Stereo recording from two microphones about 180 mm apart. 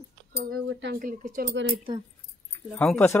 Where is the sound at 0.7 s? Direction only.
75° right (ahead or behind).